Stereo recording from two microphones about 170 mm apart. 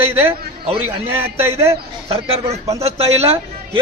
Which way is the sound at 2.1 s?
35° right (ahead or behind).